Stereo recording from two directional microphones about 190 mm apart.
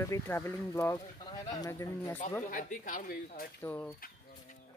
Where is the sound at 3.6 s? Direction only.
10° left (ahead or behind).